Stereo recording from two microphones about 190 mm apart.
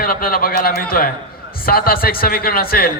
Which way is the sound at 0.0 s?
50° left (ahead or behind).